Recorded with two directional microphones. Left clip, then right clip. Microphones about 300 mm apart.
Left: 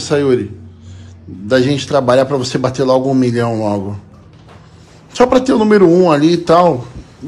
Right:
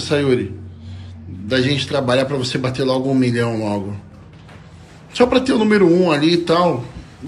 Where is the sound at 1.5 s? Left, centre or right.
Centre.